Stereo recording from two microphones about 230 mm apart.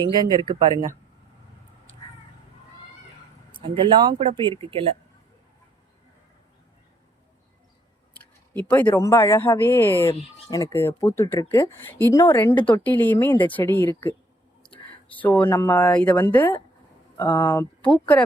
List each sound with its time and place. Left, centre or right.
0.2 s speech: centre
3.6 s speech: right
8.1 s speech: centre
15.1 s speech: centre